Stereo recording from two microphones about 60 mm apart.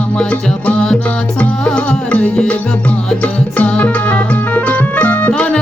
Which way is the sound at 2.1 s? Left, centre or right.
Left.